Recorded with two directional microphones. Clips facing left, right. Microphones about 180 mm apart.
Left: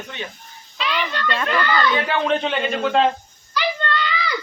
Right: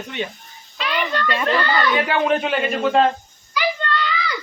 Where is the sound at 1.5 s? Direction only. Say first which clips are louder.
Even; 20° right (ahead or behind).